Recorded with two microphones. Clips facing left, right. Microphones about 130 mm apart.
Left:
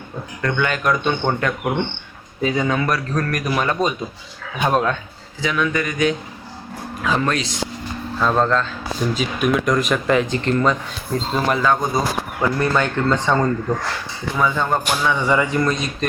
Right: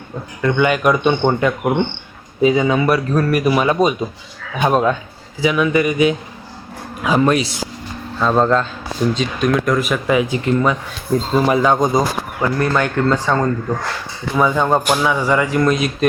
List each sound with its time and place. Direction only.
0.4 s speech: 10° right (ahead or behind)
9.1 s speech: 5° left (ahead or behind)
11.6 s speech: 20° right (ahead or behind)
12.4 s speech: 5° right (ahead or behind)
15.0 s speech: 5° right (ahead or behind)